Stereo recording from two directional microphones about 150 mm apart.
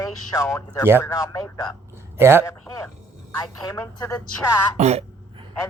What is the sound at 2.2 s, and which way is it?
Speech, 15° right (ahead or behind).